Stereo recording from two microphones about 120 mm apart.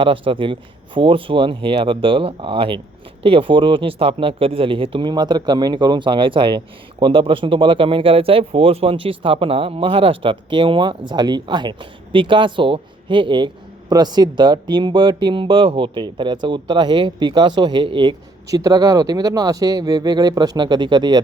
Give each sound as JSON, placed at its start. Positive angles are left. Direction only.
{"t": 0.0, "sound": "speech", "side_deg": -45}
{"t": 18.4, "sound": "speech", "side_deg": -30}